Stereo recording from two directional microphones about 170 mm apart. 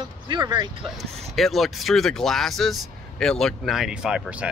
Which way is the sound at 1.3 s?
Centre (ahead or behind).